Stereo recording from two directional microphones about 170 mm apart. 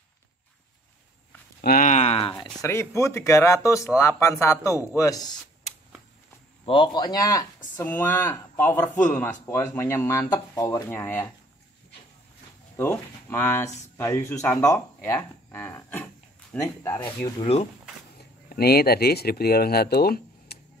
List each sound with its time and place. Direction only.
1.6 s speech: 55° left (ahead or behind); by 2.3 s 35° left (ahead or behind)
2.3 s speech: 20° left (ahead or behind)
6.6 s speech: 30° left (ahead or behind)
10.9 s speech: 10° left (ahead or behind)
12.7 s speech: 10° left (ahead or behind)
15.1 s a sound: 10° left (ahead or behind)
16.6 s speech: 15° left (ahead or behind)
17.4 s speech: 40° left (ahead or behind)
18.5 s speech: 65° left (ahead or behind)